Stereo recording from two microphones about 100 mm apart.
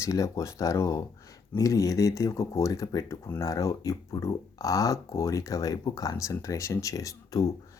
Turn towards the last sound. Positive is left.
turn(degrees=35)  # may be behind; listen again after turning